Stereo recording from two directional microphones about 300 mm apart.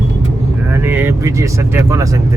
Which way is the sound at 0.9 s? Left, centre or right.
Centre.